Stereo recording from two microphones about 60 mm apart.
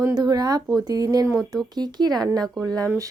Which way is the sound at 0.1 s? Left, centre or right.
Right.